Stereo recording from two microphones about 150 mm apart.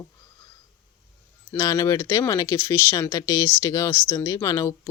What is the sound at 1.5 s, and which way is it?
Speech, 20° left (ahead or behind).